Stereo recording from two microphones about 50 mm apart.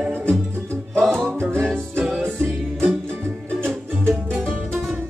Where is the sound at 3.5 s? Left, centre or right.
Right.